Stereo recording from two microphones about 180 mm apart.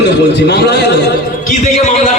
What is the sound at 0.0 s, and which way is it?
A man's voice, 65° left (ahead or behind).